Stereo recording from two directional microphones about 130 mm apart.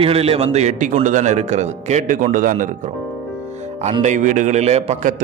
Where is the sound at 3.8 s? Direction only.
65° right (ahead or behind).